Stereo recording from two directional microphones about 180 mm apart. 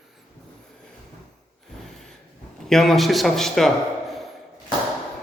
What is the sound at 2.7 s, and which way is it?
A man's voice, centre (ahead or behind).